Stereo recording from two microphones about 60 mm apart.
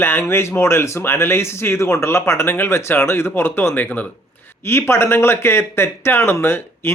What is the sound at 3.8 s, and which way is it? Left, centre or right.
Speech, left.